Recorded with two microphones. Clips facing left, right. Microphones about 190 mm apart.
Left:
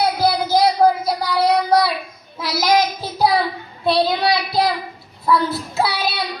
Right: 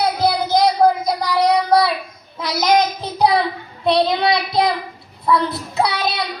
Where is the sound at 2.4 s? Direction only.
5° left (ahead or behind).